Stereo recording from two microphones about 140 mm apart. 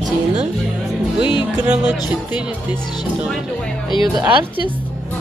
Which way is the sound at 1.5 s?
10° right (ahead or behind).